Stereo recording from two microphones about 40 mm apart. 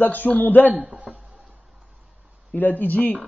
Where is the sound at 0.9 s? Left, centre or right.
Right.